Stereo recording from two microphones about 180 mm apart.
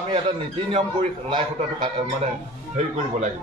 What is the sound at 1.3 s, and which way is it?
Speech, 25° right (ahead or behind).